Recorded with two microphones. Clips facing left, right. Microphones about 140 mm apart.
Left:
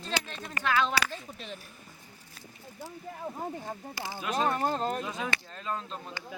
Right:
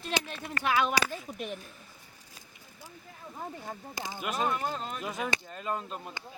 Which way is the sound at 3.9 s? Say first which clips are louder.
Even; 20° right (ahead or behind).